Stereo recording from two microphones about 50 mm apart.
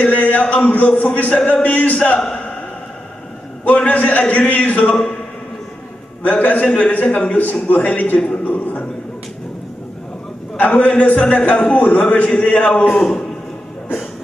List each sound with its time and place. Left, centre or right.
0.0 s speech: left
3.6 s a man's voice: left
6.2 s a man's voice: left
8.2 s speech: left
10.6 s speech: left